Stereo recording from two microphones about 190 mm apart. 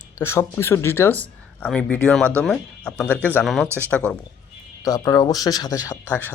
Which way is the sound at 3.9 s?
5° left (ahead or behind).